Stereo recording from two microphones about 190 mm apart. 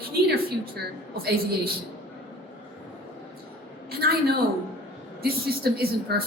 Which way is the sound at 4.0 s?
55° right (ahead or behind).